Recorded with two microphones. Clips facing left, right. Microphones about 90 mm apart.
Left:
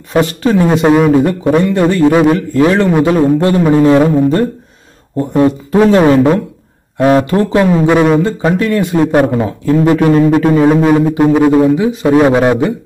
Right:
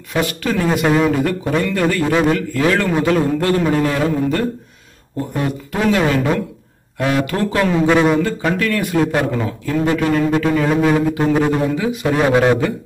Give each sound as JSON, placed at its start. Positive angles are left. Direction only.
{"t": 0.1, "sound": "a man's voice", "side_deg": 30}
{"t": 7.3, "sound": "a man's voice", "side_deg": 20}
{"t": 10.9, "sound": "a man's voice", "side_deg": 15}